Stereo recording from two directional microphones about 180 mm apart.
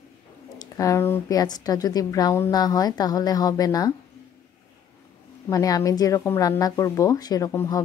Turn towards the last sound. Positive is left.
turn(degrees=15)  # may be behind; listen again after turning